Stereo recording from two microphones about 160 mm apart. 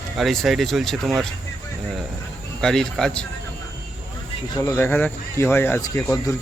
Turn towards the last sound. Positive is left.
turn(degrees=20)  # may be behind; listen again after turning